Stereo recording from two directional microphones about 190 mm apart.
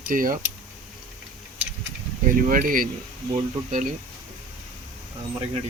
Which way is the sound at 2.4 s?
45° right (ahead or behind).